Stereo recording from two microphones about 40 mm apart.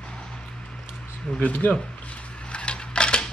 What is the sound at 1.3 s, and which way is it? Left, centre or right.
Speech, left.